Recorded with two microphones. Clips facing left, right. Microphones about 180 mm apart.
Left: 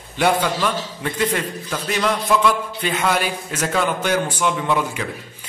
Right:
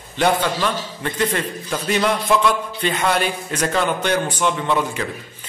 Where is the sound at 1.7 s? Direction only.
Centre (ahead or behind).